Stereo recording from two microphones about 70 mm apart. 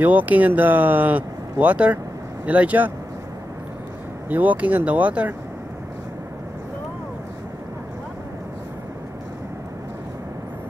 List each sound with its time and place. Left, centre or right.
0.0 s speech: right
4.3 s speech: right